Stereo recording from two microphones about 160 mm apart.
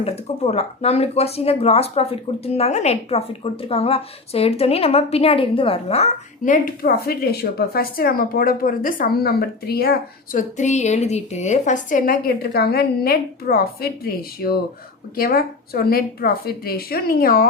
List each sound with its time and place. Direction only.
0.0 s speech: 40° left (ahead or behind); by 10.4 s 75° left (ahead or behind)
10.6 s a woman's voice: 45° left (ahead or behind); by 17.4 s 65° left (ahead or behind)